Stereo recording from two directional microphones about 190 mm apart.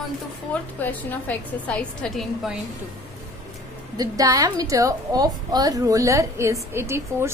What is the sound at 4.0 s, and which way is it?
A woman's voice, 20° right (ahead or behind).